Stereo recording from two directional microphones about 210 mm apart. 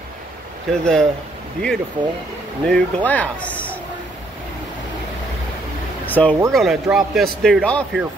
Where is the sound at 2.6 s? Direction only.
5° left (ahead or behind).